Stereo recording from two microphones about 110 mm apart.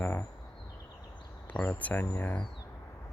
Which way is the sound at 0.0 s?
20° left (ahead or behind).